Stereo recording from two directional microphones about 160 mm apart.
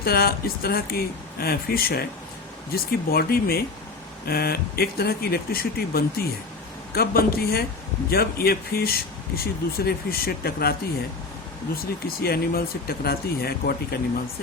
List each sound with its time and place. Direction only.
0.0 s speech: 70° left (ahead or behind)